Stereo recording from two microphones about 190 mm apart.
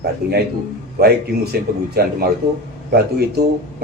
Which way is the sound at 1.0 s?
55° right (ahead or behind).